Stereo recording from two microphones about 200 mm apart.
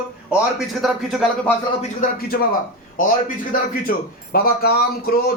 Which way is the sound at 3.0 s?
45° left (ahead or behind).